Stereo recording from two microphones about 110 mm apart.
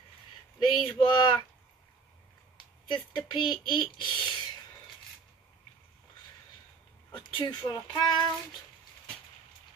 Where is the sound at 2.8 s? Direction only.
45° left (ahead or behind).